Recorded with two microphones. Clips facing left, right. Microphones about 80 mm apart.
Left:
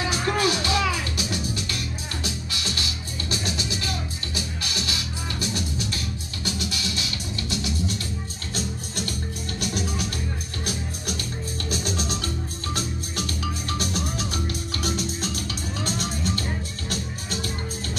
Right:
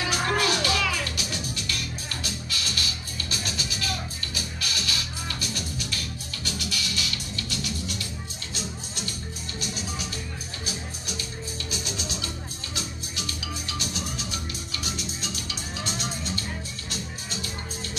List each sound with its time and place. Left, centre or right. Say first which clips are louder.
0.1 s music: even; left
8.5 s music: left 6 dB; left
11.7 s music: left 7 dB; left